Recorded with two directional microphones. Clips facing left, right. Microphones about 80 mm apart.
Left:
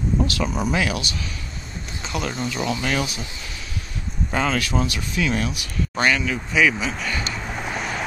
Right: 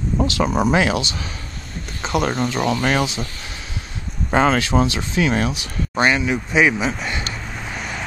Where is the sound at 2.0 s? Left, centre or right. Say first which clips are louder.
Right 7 dB; right.